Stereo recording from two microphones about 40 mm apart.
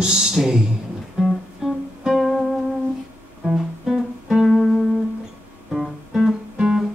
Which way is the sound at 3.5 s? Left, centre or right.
Centre.